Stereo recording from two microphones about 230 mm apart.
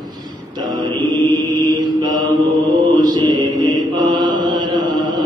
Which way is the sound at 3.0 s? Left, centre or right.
Centre.